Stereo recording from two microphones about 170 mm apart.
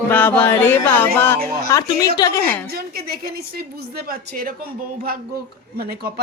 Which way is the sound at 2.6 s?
65° right (ahead or behind).